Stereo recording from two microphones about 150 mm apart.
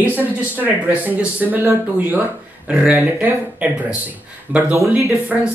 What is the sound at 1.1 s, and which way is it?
Speech, 15° right (ahead or behind).